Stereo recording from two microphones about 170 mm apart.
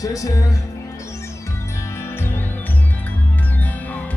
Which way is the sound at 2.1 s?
10° left (ahead or behind).